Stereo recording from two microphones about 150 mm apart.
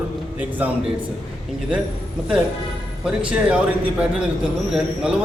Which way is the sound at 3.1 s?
5° right (ahead or behind).